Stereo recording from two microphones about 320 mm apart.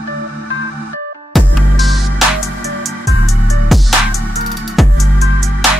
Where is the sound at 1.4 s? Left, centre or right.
Centre.